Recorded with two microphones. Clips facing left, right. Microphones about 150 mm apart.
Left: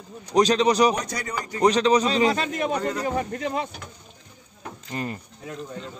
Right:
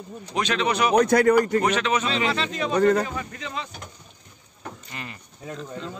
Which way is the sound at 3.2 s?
55° left (ahead or behind).